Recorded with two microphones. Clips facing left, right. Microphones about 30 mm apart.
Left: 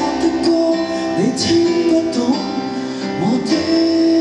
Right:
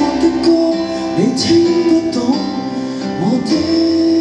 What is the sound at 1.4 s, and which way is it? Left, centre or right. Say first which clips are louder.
Music: right 3 dB; centre.